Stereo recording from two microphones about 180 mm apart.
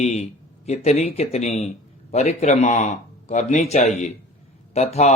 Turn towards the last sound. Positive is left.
turn(degrees=35)  # may be behind; listen again after turning